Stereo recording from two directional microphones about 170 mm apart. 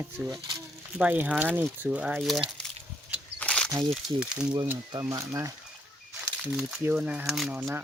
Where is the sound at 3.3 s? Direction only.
5° left (ahead or behind).